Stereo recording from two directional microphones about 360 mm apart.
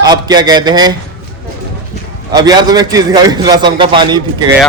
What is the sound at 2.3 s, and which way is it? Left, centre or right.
A man's voice, centre.